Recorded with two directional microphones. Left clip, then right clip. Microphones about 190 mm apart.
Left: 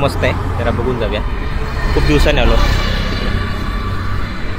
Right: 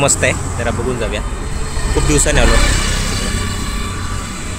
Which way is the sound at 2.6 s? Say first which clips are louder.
Right 1 dB; 55° right (ahead or behind).